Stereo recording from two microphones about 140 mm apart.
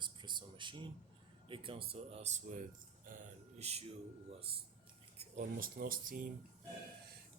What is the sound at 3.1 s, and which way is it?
Speech, 80° right.